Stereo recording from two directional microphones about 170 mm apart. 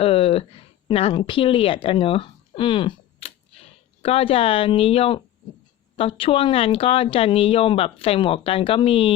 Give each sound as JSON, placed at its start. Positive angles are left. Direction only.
{"t": 0.0, "sound": "speech", "side_deg": 35}